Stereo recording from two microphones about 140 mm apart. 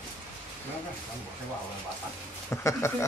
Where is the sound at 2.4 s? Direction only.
20° left (ahead or behind).